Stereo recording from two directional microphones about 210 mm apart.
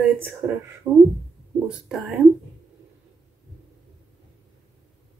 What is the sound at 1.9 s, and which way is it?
Speech, centre (ahead or behind).